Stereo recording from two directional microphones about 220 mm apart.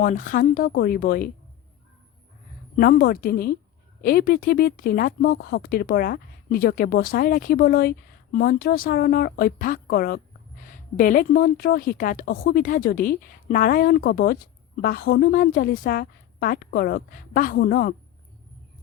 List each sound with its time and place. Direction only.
0.0 s a woman's voice: 35° left (ahead or behind)
2.7 s a woman's voice: 40° left (ahead or behind)